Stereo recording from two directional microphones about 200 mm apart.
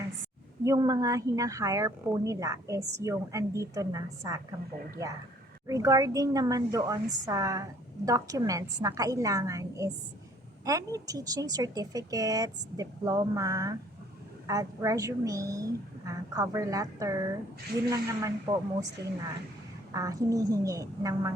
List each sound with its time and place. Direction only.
0.6 s a woman's voice: 15° right (ahead or behind)
5.6 s a woman's voice: 15° right (ahead or behind)
19.0 s speech: 55° right (ahead or behind)
19.9 s a woman's voice: 15° right (ahead or behind)